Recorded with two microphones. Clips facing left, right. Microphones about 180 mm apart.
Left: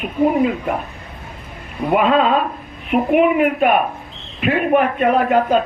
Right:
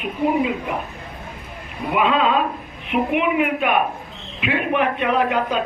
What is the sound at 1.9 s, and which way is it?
A man's voice, 45° left (ahead or behind).